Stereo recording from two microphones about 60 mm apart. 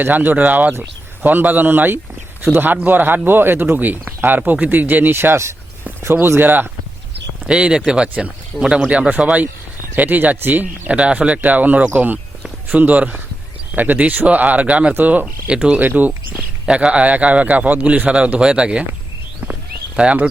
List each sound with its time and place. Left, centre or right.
0.0 s speech: right
5.1 s speech: right
7.4 s speech: centre
8.5 s speech: centre
8.9 s speech: right
15.4 s speech: centre
15.8 s speech: right
18.1 s speech: centre
20.0 s speech: right